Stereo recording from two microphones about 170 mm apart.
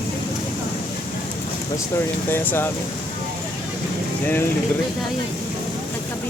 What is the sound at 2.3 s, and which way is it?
Speech, 15° left (ahead or behind).